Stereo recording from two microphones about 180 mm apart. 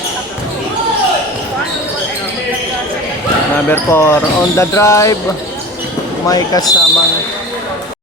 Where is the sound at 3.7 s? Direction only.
15° left (ahead or behind).